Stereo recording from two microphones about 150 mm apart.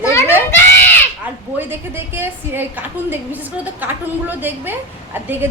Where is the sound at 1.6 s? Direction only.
15° right (ahead or behind).